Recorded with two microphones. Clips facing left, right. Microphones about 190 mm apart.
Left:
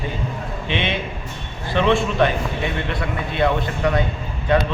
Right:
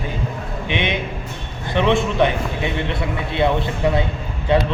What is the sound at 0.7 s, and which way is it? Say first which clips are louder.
A man's voice: right 1 dB; 15° right (ahead or behind).